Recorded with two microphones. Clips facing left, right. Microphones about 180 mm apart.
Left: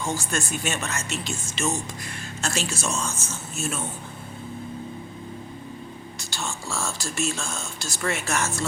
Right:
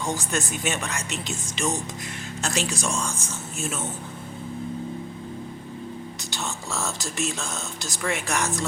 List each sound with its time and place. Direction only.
0.0 s speech: 20° right (ahead or behind)
6.3 s speech: 20° right (ahead or behind)